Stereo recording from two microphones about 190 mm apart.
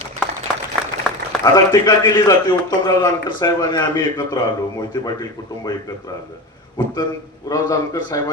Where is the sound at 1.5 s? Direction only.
20° left (ahead or behind).